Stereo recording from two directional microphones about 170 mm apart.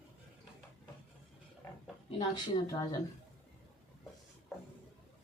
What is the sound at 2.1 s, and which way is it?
Speech, 20° left (ahead or behind).